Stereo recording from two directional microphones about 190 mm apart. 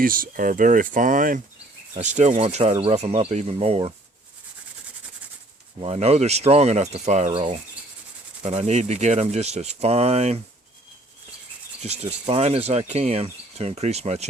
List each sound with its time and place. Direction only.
0.0 s speech: 50° right (ahead or behind); by 3.9 s 30° right (ahead or behind)
5.8 s speech: 35° right (ahead or behind)
11.8 s speech: 35° right (ahead or behind)